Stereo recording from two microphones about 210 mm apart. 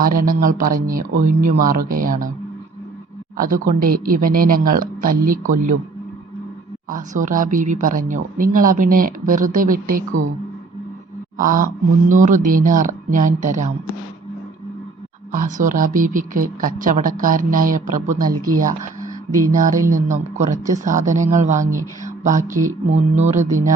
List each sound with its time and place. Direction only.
0.0 s speech: 40° right (ahead or behind)
3.3 s speech: 40° right (ahead or behind)
6.9 s speech: 40° right (ahead or behind)
11.3 s mantra: 40° right (ahead or behind)
12.0 s speech: 35° right (ahead or behind)
15.3 s speech: 40° right (ahead or behind)
19.5 s speech: 40° right (ahead or behind)
22.0 s a sound: 35° right (ahead or behind)
22.6 s speech: 35° right (ahead or behind)